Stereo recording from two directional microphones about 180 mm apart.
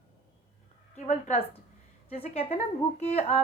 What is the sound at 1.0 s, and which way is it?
A woman's voice, 35° left (ahead or behind).